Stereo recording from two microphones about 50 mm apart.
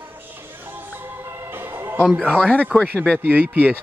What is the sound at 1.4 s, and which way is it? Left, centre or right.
Music, right.